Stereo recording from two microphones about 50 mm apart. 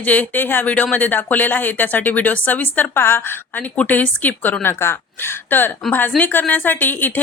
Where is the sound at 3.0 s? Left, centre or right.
Left.